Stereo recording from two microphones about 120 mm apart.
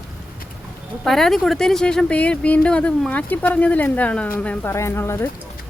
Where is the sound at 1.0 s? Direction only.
Centre (ahead or behind); by 5.3 s 20° left (ahead or behind).